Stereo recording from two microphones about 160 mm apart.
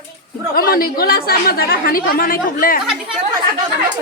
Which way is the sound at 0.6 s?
65° left (ahead or behind).